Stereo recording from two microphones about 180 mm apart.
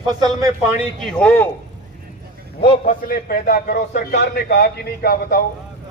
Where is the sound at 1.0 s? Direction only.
10° left (ahead or behind).